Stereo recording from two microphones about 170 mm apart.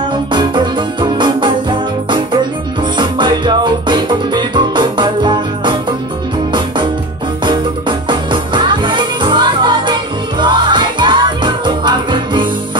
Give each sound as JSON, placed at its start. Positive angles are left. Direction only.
{"t": 0.3, "sound": "music", "side_deg": -25}
{"t": 8.1, "sound": "music", "side_deg": -30}